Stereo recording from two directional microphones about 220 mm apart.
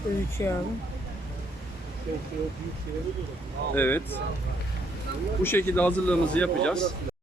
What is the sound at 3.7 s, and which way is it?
Speech, 10° left (ahead or behind).